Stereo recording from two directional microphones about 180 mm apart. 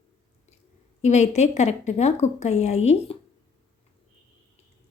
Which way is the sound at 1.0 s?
40° left (ahead or behind).